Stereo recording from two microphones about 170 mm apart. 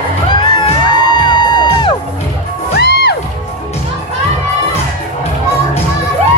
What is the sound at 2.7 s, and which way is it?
Music, 70° left (ahead or behind).